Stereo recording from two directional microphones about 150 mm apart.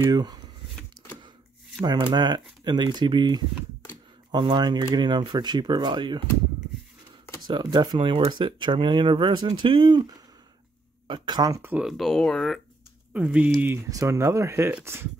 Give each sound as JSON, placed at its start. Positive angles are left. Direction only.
{"t": 0.0, "sound": "speech", "side_deg": -25}
{"t": 1.8, "sound": "speech", "side_deg": -30}
{"t": 7.4, "sound": "speech", "side_deg": -30}
{"t": 11.8, "sound": "speech", "side_deg": 0}
{"t": 13.8, "sound": "speech", "side_deg": -20}